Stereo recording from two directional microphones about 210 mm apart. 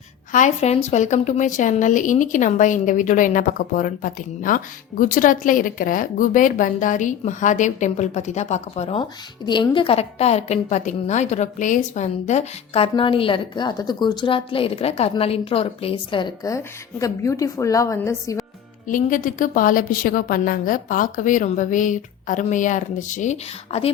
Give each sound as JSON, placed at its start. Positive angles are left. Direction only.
{"t": 0.3, "sound": "a woman's voice", "side_deg": 35}
{"t": 18.9, "sound": "a woman's voice", "side_deg": 40}